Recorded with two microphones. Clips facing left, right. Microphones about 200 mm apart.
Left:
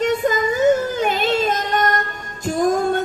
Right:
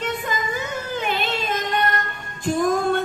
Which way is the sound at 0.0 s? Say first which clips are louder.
Left 8 dB; 40° left (ahead or behind).